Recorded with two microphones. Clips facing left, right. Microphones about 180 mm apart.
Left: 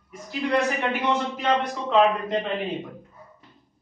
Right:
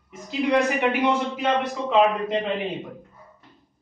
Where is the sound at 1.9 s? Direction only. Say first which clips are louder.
Even; 5° right (ahead or behind).